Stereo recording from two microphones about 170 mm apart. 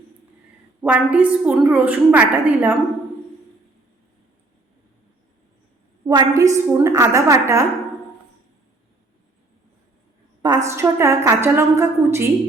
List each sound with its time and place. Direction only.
0.8 s a woman's voice: 10° right (ahead or behind)
6.1 s a woman's voice: 20° right (ahead or behind)
10.4 s a woman's voice: 20° right (ahead or behind)